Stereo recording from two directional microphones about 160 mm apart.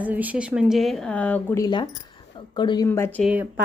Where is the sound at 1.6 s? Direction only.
25° left (ahead or behind).